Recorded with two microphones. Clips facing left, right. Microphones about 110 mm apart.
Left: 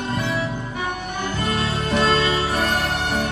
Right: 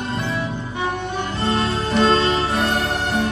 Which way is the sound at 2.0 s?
30° right (ahead or behind).